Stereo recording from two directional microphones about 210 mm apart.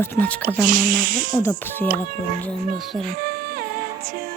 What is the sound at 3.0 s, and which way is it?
Music, 45° right (ahead or behind).